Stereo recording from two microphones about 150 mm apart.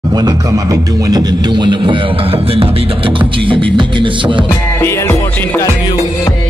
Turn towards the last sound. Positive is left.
turn(degrees=15)  # may be behind; listen again after turning